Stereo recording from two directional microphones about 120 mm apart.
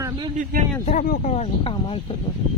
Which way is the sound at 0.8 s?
80° left.